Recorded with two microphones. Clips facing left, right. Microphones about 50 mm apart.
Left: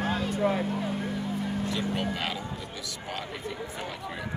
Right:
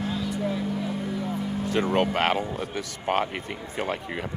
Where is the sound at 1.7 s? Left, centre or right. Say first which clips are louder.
Right 7 dB; right.